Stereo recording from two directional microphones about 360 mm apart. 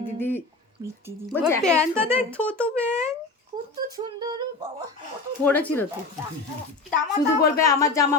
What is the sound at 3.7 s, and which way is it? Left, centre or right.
Speech, centre.